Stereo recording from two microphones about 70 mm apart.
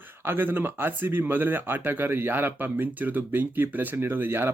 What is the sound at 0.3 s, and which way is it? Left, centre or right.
Speech, right.